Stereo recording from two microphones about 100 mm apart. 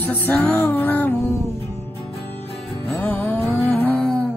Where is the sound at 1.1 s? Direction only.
30° left (ahead or behind).